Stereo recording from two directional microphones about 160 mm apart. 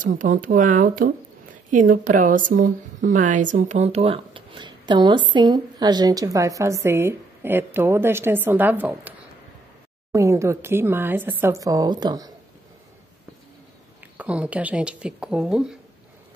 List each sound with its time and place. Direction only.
0.0 s a woman's voice: 55° right (ahead or behind); by 9.1 s 10° right (ahead or behind)
10.1 s speech: 20° right (ahead or behind)
14.1 s speech: 10° right (ahead or behind)